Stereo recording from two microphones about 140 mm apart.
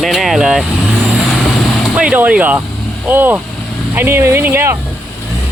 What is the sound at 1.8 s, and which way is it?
Speech, 5° right (ahead or behind).